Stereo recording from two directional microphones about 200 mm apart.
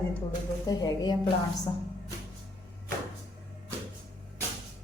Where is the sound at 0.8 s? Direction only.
20° left (ahead or behind).